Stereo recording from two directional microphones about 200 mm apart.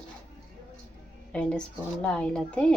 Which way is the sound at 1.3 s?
5° left (ahead or behind).